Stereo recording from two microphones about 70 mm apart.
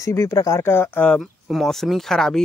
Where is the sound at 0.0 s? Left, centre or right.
Left.